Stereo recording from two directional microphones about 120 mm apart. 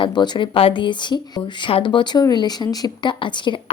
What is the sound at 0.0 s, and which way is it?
A woman's voice, 40° left (ahead or behind).